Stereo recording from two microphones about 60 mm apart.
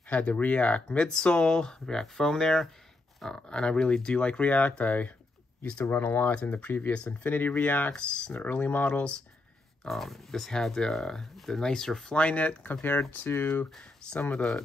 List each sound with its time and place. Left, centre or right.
0.1 s speech: left
6.3 s speech: left
7.9 s speech: centre
8.8 s speech: centre
9.8 s speech: centre
12.2 s speech: left
13.3 s speech: left